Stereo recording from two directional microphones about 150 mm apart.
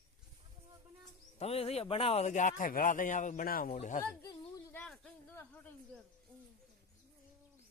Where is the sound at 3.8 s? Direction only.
55° left (ahead or behind).